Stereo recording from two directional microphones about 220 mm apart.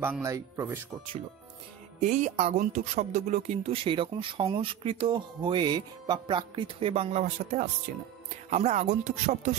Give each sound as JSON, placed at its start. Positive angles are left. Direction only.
{"t": 0.0, "sound": "speech", "side_deg": -10}
{"t": 2.0, "sound": "speech", "side_deg": -30}